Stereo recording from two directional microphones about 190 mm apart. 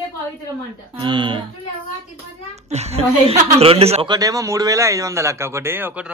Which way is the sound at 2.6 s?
35° right (ahead or behind).